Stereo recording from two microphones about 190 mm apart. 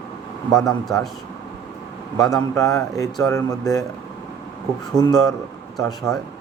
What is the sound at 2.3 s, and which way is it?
Speech, 20° left (ahead or behind).